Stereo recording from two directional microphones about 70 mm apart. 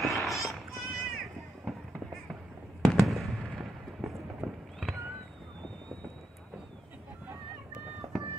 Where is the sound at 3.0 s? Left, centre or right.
Centre.